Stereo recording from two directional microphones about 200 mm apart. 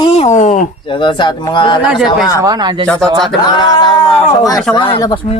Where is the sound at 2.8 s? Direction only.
5° left (ahead or behind).